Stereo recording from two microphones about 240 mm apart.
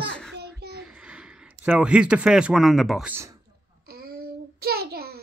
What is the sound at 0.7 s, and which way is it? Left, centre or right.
Speech, centre.